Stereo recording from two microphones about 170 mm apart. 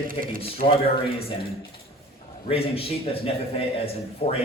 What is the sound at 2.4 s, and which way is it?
A man's voice, 35° left (ahead or behind).